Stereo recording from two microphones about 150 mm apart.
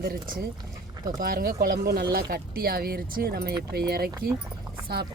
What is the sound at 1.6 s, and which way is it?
Speech, 90° right.